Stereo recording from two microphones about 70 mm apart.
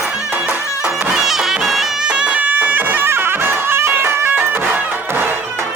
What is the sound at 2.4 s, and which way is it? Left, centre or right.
Music, right.